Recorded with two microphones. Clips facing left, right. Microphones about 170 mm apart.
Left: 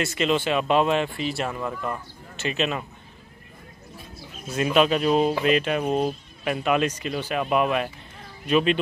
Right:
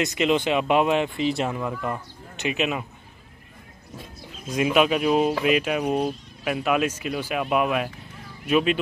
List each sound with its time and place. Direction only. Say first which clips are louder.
0.0 s speech: right 2 dB; 15° right (ahead or behind)
4.5 s speech: even; 10° right (ahead or behind)